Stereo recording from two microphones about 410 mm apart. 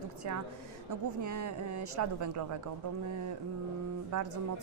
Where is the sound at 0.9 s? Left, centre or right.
Right.